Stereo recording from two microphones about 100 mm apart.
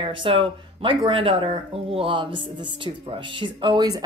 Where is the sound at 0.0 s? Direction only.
55° right (ahead or behind).